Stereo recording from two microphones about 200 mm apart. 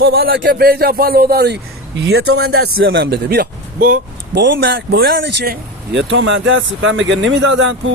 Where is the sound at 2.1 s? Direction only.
90° right.